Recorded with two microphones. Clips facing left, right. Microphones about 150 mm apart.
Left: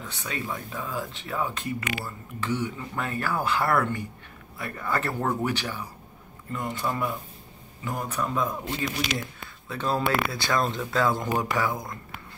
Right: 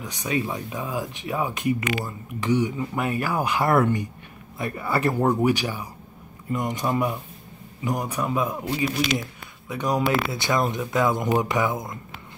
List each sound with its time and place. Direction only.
0.0 s speech: 15° right (ahead or behind)